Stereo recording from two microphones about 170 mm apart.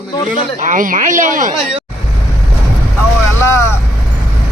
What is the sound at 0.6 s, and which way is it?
Speech, 50° right (ahead or behind).